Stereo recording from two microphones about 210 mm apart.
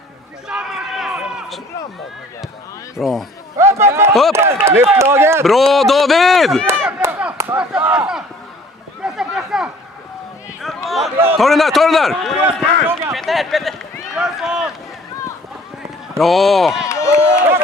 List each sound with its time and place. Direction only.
0.5 s run: 5° right (ahead or behind)
3.0 s a man's voice: centre (ahead or behind)
3.5 s speech: 15° right (ahead or behind)
5.4 s a man's voice: centre (ahead or behind)
6.8 s a sound: 10° right (ahead or behind)
9.0 s a sound: 5° right (ahead or behind)
10.9 s a man's voice: centre (ahead or behind)
16.2 s a man's voice: centre (ahead or behind)
16.9 s a sound: 15° left (ahead or behind)